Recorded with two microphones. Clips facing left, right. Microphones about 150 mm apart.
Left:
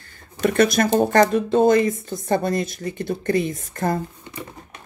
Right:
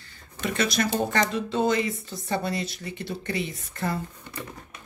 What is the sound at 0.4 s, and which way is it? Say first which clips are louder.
Speech: left 8 dB; 50° left (ahead or behind).